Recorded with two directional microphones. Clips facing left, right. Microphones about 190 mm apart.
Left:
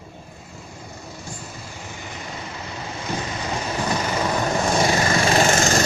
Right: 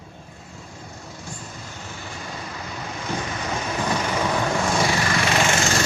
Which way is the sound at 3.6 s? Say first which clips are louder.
Even; 15° left (ahead or behind).